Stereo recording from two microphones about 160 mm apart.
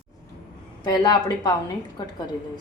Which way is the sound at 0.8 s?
25° left (ahead or behind).